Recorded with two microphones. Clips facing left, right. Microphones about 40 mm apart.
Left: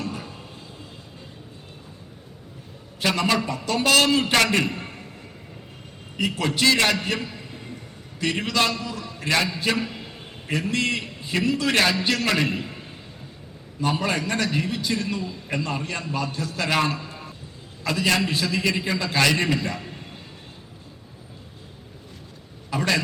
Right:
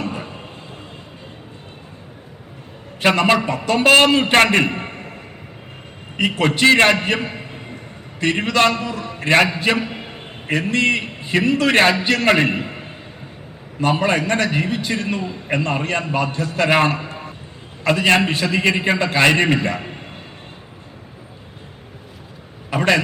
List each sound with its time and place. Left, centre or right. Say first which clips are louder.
0.0 s a sound: right 5 dB; right
3.0 s a man's voice: right 7 dB; right
6.1 s a man's voice: right 6 dB; right
22.7 s a man's voice: right 6 dB; right